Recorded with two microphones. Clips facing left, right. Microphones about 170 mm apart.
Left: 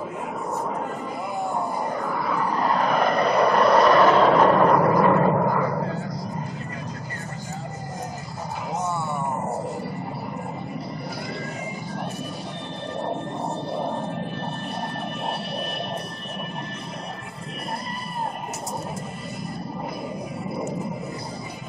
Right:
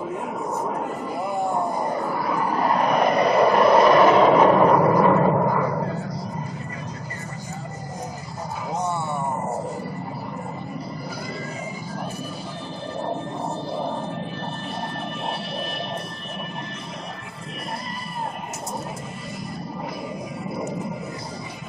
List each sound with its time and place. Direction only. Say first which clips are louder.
1.4 s vehicle: right 2 dB; centre (ahead or behind)
1.9 s a sound: right 2 dB; 10° right (ahead or behind)
2.2 s vehicle: right 1 dB; 5° right (ahead or behind)
8.9 s roaring cats: right 1 dB; centre (ahead or behind)
13.7 s a sound: even; centre (ahead or behind)
20.4 s music: even; centre (ahead or behind)